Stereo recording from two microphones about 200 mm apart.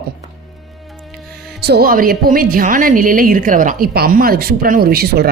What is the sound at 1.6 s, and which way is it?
A woman's voice, 55° right (ahead or behind).